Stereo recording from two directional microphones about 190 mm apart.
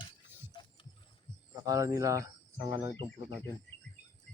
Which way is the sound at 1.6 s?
20° right (ahead or behind).